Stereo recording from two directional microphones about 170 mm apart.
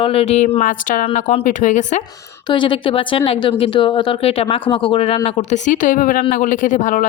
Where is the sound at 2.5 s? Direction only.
30° left (ahead or behind); by 7.1 s 50° left (ahead or behind).